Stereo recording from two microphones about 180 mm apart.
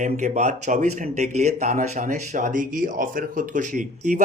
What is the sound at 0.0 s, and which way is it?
Speech, 40° right (ahead or behind).